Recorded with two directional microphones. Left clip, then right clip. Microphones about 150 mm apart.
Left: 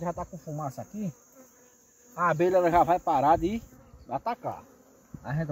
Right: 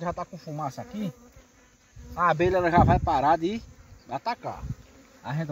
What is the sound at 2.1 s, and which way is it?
Speech, 20° left (ahead or behind).